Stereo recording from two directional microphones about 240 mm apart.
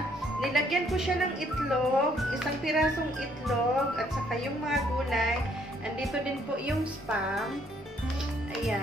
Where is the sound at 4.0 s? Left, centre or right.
Centre.